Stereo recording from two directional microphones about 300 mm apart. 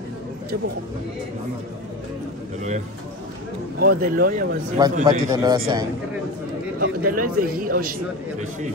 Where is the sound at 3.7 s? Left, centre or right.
Right.